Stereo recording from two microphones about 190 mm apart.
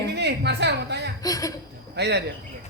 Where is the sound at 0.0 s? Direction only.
60° right (ahead or behind).